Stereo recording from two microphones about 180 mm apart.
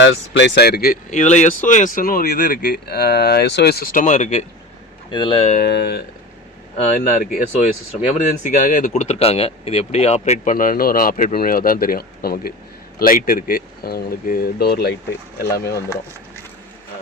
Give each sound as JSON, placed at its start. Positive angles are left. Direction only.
{"t": 0.0, "sound": "speech", "side_deg": 85}
{"t": 1.1, "sound": "speech", "side_deg": 40}
{"t": 5.1, "sound": "speech", "side_deg": 30}
{"t": 5.5, "sound": "speech", "side_deg": 65}
{"t": 6.7, "sound": "speech", "side_deg": 50}
{"t": 8.4, "sound": "speech", "side_deg": 45}